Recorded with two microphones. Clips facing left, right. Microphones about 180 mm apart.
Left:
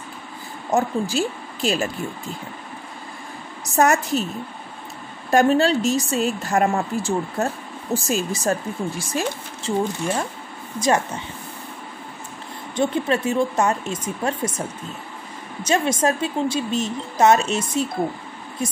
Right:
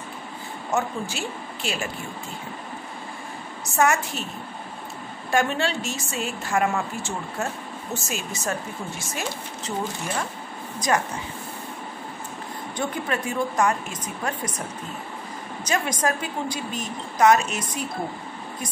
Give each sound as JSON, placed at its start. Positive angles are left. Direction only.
{"t": 0.7, "sound": "speech", "side_deg": 35}
{"t": 3.7, "sound": "speech", "side_deg": 40}
{"t": 5.3, "sound": "speech", "side_deg": 40}
{"t": 12.7, "sound": "a woman's voice", "side_deg": 25}
{"t": 15.6, "sound": "a woman's voice", "side_deg": 25}